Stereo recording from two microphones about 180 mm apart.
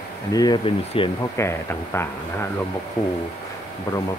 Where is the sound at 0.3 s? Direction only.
20° left (ahead or behind).